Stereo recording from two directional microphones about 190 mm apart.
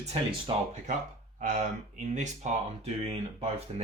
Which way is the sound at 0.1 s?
30° right (ahead or behind).